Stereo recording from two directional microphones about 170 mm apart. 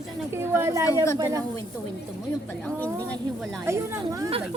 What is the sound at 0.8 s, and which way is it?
Speech, 20° left (ahead or behind).